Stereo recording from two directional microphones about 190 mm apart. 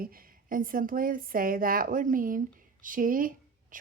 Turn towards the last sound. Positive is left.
turn(degrees=-45)  # may be behind; listen again after turning